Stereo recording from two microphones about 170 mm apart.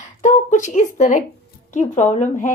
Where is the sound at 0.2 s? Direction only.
45° left (ahead or behind).